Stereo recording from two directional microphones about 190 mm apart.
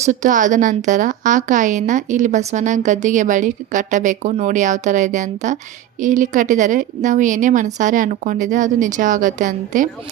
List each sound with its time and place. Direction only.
0.0 s a woman's voice: 40° right (ahead or behind)